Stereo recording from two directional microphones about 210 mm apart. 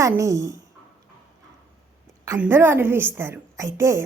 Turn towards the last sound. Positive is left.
turn(degrees=-15)  # may be behind; listen again after turning